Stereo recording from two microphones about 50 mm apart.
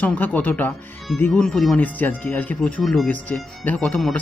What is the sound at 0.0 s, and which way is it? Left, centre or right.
Speech, left.